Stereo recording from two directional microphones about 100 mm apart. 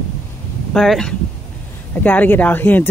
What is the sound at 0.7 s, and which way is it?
Speech, 5° left (ahead or behind).